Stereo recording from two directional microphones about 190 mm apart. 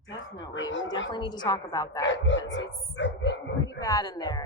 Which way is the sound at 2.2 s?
75° left (ahead or behind).